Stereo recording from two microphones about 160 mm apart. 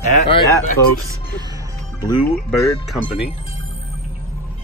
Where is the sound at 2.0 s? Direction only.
25° left (ahead or behind).